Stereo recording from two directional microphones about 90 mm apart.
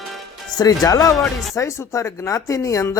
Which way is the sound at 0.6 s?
40° left (ahead or behind).